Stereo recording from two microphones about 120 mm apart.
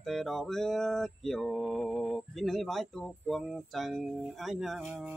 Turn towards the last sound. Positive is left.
turn(degrees=0)  # may be behind; listen again after turning